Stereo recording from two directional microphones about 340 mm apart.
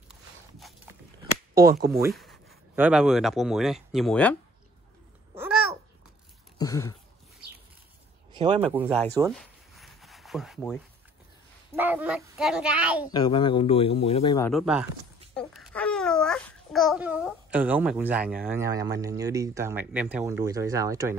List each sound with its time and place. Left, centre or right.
0.6 s a sound: centre
1.5 s speech: centre
1.9 s speech: centre
6.6 s speech: centre
8.3 s a sound: centre
8.6 s a child's voice: centre
9.3 s a sound: centre
11.7 s a child's voice: centre
13.1 s speech: centre
14.5 s a child's voice: centre